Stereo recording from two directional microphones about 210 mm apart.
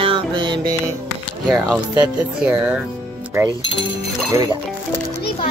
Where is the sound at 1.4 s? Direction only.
5° right (ahead or behind).